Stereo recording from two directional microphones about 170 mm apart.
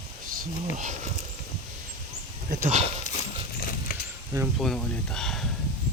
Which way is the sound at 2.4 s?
50° right (ahead or behind).